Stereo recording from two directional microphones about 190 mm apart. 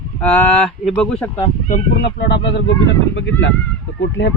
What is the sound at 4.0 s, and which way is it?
Speech, 70° left (ahead or behind).